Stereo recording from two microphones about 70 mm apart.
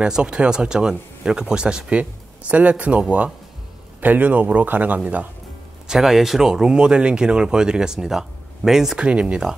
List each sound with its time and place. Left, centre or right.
0.0 s a man's voice: centre
5.9 s speech: centre